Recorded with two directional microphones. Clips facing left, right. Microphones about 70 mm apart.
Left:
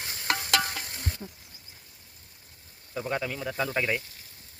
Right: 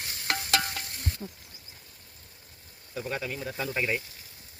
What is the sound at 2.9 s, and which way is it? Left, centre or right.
Speech, left.